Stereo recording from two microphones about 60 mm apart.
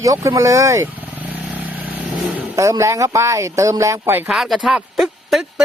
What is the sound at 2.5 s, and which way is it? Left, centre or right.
Speech, right.